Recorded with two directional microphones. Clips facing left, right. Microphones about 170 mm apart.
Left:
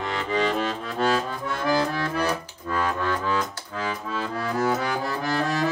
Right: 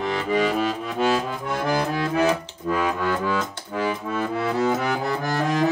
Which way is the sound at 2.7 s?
10° right (ahead or behind).